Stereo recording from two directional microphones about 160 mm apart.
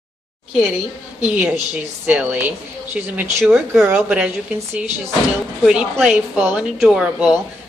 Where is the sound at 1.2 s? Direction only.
10° right (ahead or behind).